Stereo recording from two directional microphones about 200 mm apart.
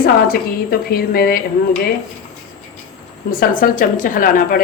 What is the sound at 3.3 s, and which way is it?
A woman's voice, 45° left (ahead or behind).